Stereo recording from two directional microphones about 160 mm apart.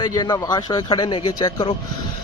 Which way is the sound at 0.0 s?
25° left (ahead or behind).